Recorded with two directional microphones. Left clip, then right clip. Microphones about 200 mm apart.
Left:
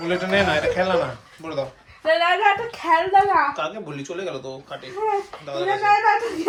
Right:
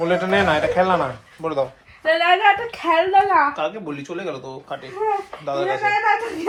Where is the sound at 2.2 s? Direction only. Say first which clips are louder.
Right 4 dB; 30° right (ahead or behind).